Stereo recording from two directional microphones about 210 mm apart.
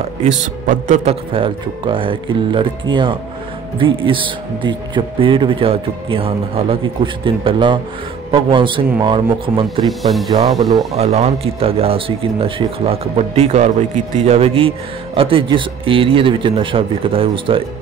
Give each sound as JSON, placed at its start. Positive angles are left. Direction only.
{"t": 0.7, "sound": "a man's voice", "side_deg": -40}
{"t": 1.3, "sound": "a man's voice", "side_deg": -25}
{"t": 9.8, "sound": "speech", "side_deg": 0}
{"t": 11.0, "sound": "a man's voice", "side_deg": -30}